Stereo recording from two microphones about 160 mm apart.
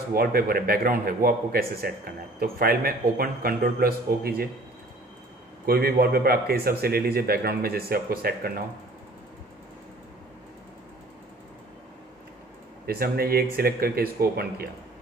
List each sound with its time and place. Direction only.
0.1 s a man's voice: 70° right (ahead or behind)
5.7 s a man's voice: 70° right (ahead or behind)
12.8 s a man's voice: 70° right (ahead or behind)